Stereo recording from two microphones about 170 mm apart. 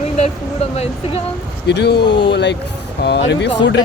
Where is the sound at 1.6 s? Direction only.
80° left.